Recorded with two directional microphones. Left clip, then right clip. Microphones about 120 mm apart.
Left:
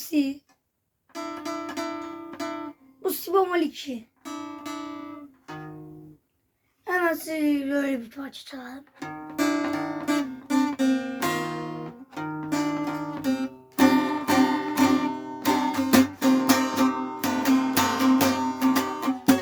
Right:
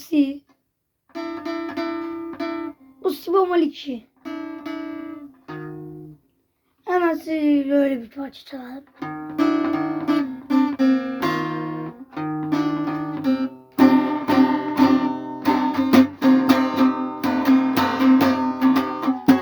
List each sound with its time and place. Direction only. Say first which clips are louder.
0.0 s a woman's voice: right 5 dB; 20° right (ahead or behind)
1.1 s music: right 4 dB; 25° right (ahead or behind)
6.8 s a sound: right 4 dB; 20° right (ahead or behind)